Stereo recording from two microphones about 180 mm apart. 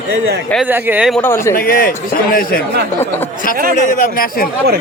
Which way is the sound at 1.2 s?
15° left (ahead or behind).